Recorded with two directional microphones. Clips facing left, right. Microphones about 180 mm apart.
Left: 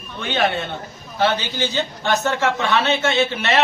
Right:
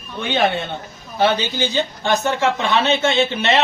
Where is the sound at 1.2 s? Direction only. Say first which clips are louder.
Right 2 dB; 15° right (ahead or behind).